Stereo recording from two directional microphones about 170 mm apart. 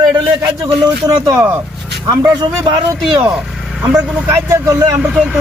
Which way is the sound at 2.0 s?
25° right (ahead or behind).